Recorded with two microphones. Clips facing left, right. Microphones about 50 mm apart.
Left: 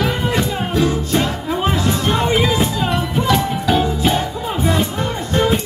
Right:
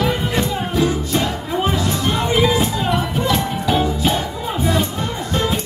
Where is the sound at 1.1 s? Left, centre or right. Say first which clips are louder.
Left 2 dB; left.